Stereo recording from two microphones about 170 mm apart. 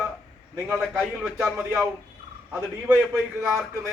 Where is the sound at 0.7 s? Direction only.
5° right (ahead or behind).